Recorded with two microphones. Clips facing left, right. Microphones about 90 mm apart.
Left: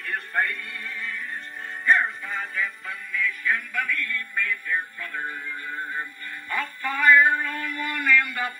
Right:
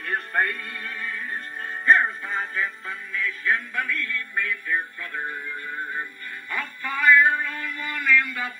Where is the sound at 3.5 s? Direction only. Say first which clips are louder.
Right 3 dB; 20° right (ahead or behind).